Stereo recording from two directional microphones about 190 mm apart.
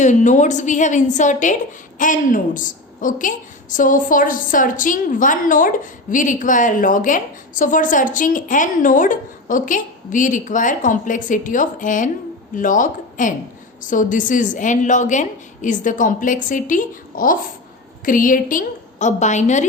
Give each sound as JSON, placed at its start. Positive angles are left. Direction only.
{"t": 0.0, "sound": "a woman's voice", "side_deg": 40}